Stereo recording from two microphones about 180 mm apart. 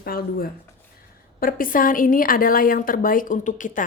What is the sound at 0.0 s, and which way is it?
A woman's voice, 55° left (ahead or behind).